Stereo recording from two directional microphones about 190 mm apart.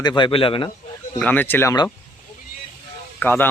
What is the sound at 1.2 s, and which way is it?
Speech, 10° left (ahead or behind).